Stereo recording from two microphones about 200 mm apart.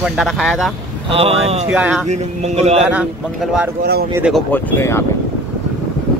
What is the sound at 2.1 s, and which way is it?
Speech, 35° right (ahead or behind).